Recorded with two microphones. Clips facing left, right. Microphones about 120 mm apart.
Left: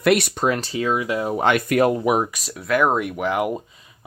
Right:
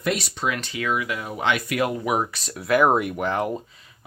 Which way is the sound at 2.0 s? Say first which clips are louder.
Left 4 dB; 20° left (ahead or behind).